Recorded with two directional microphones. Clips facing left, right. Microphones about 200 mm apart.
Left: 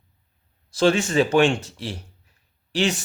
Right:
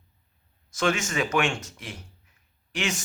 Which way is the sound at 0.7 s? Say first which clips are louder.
Left 7 dB; 35° left (ahead or behind).